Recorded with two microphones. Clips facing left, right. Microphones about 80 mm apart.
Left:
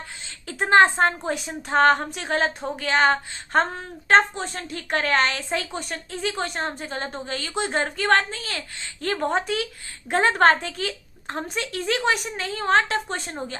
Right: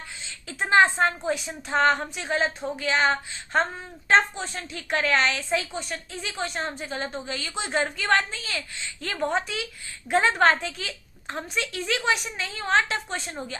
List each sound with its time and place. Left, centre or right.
0.4 s a woman's voice: left